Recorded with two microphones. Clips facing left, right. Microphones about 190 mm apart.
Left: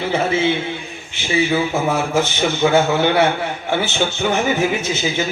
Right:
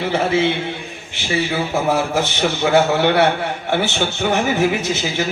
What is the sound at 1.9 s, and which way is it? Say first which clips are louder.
A man's voice: even; 65° right (ahead or behind).